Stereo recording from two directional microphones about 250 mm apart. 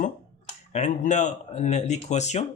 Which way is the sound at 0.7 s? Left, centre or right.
Left.